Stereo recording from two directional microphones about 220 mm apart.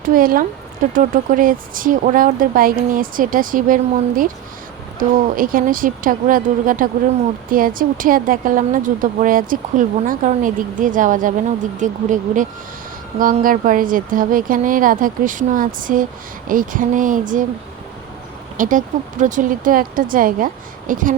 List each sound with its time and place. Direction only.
0.0 s speech: 40° right (ahead or behind)
4.9 s speech: 40° right (ahead or behind)
18.5 s speech: 35° right (ahead or behind)